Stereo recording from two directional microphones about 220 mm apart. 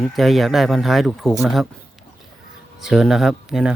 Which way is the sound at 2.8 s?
Centre (ahead or behind).